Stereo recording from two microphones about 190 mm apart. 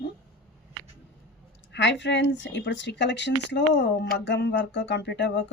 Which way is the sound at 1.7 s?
70° left (ahead or behind).